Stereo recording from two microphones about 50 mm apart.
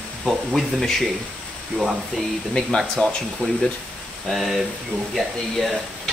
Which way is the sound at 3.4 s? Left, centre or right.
Left.